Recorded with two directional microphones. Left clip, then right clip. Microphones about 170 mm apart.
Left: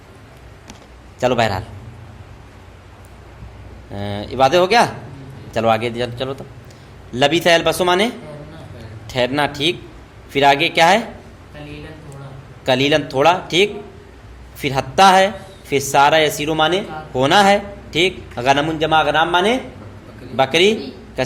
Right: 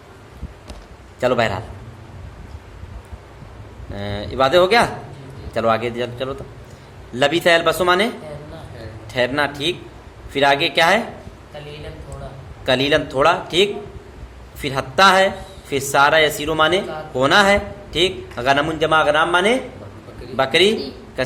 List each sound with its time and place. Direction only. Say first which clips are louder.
1.2 s a man's voice: left 1 dB; 30° left (ahead or behind)
3.9 s a man's voice: left 1 dB; 30° left (ahead or behind)
9.1 s a man's voice: left 1 dB; 35° left (ahead or behind)
12.6 s a man's voice: left 1 dB; 35° left (ahead or behind)